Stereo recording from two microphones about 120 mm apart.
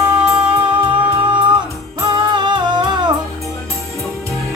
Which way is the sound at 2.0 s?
40° right (ahead or behind).